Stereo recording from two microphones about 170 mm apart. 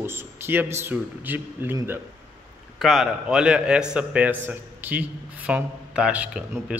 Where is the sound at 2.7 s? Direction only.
Centre (ahead or behind).